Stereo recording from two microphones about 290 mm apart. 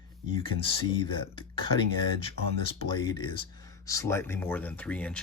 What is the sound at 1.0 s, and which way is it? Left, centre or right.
Speech, centre.